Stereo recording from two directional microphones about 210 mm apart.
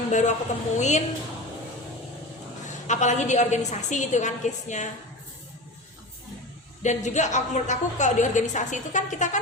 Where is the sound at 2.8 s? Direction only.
35° left (ahead or behind).